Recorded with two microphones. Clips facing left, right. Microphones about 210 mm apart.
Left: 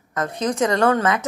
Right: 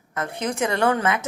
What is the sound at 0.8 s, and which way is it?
Speech, 15° right (ahead or behind).